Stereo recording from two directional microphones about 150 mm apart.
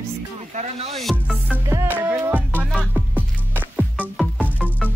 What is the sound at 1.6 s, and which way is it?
Music, 15° right (ahead or behind).